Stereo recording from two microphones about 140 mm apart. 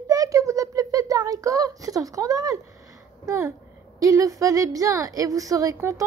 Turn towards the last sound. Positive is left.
turn(degrees=-20)  # may be behind; listen again after turning